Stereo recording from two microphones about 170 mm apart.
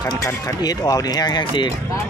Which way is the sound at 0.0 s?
20° left (ahead or behind).